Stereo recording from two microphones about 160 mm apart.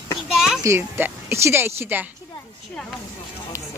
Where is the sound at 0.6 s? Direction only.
15° right (ahead or behind).